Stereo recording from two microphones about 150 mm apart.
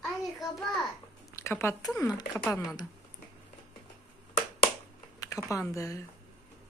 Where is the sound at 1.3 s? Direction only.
20° left (ahead or behind).